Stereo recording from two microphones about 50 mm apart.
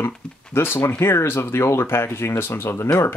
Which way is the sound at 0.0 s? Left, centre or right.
Left.